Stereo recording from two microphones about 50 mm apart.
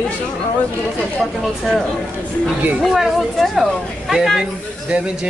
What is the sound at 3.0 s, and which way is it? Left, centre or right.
A woman's voice, centre.